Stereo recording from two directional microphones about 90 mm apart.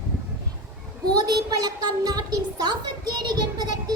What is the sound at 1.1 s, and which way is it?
A woman's voice, 50° right (ahead or behind).